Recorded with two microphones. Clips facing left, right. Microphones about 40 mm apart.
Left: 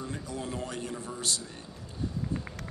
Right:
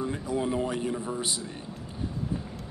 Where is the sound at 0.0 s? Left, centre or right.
Centre.